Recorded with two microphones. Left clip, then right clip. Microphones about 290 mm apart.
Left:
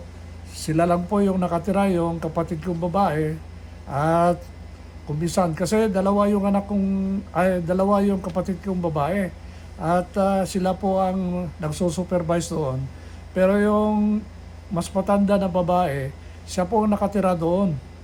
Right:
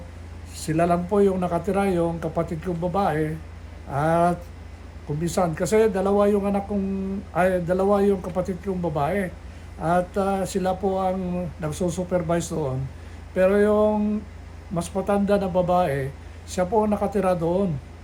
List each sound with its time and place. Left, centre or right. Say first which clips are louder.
0.5 s speech: left 1 dB; centre